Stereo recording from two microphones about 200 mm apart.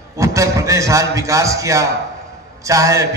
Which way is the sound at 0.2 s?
15° right (ahead or behind).